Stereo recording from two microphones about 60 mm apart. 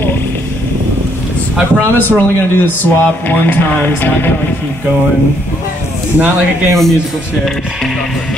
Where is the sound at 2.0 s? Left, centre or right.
Left.